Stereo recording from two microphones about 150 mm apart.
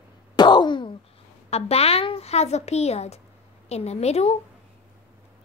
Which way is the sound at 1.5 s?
45° left (ahead or behind).